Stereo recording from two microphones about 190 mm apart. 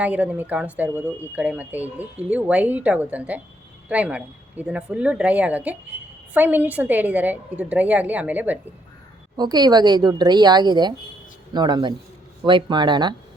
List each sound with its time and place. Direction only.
0.0 s speech: 5° right (ahead or behind)
9.4 s a woman's voice: 20° right (ahead or behind)